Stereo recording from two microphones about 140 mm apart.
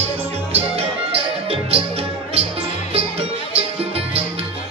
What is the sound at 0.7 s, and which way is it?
Music, 45° right (ahead or behind).